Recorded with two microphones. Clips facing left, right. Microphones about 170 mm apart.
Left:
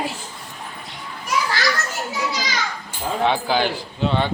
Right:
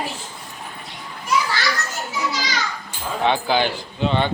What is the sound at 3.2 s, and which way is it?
A man's voice, 5° left (ahead or behind).